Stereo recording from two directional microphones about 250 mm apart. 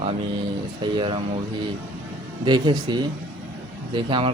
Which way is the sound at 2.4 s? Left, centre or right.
Centre.